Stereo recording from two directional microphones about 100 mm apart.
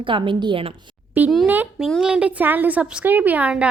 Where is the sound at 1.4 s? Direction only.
20° right (ahead or behind).